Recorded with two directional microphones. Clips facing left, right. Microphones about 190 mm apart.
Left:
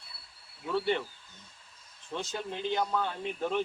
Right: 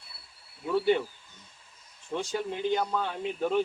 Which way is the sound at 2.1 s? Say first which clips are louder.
Right 5 dB; 10° right (ahead or behind).